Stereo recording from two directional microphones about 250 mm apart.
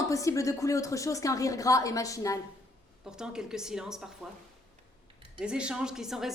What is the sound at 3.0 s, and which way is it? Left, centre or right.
A woman's voice, centre.